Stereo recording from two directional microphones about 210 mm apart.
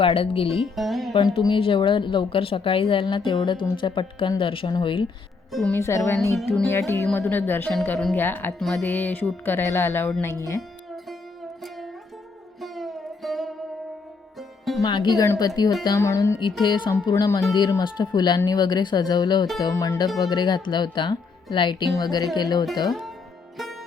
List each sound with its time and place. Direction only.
0.0 s a woman's voice: 25° left (ahead or behind)
0.6 s speech: centre (ahead or behind)
1.1 s a woman's voice: 20° left (ahead or behind)
5.5 s speech: centre (ahead or behind)
12.5 s music: centre (ahead or behind)
14.8 s a woman's voice: 20° left (ahead or behind)
22.9 s music: centre (ahead or behind)